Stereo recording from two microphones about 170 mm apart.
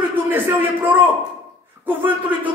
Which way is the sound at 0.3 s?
10° right (ahead or behind).